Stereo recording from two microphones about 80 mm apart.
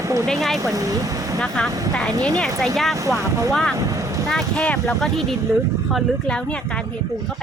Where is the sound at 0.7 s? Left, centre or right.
Right.